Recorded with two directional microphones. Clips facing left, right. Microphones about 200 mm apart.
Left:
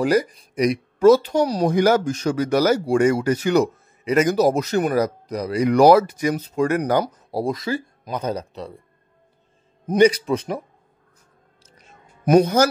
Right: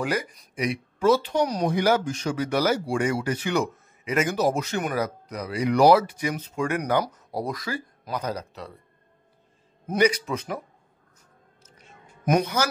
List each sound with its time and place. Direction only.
0.0 s speech: 35° left (ahead or behind)
1.7 s speech: 45° left (ahead or behind); by 8.7 s 25° left (ahead or behind)
9.9 s speech: 30° left (ahead or behind)
12.6 s speech: 40° left (ahead or behind)